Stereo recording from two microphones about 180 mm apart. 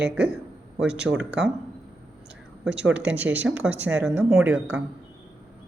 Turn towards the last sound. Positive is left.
turn(degrees=-10)  # may be behind; listen again after turning